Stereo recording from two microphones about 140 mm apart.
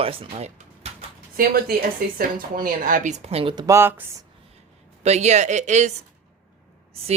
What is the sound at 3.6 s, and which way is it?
Speech, 20° right (ahead or behind).